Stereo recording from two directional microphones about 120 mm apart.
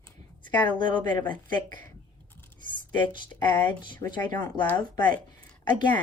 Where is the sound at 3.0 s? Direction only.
40° left (ahead or behind).